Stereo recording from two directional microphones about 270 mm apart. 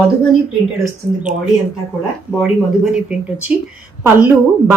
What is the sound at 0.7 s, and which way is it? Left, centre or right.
Speech, centre.